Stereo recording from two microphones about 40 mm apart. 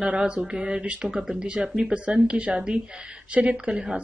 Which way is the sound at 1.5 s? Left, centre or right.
Right.